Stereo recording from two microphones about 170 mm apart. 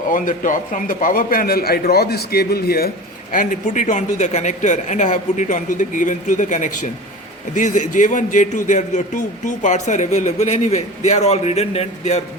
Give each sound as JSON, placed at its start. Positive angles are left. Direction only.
{"t": 0.1, "sound": "a man's voice", "side_deg": 50}
{"t": 3.3, "sound": "a man's voice", "side_deg": 50}